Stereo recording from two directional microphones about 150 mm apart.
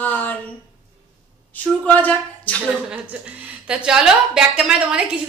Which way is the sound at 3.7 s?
5° right (ahead or behind).